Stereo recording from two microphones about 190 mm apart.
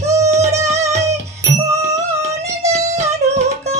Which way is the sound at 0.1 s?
15° right (ahead or behind).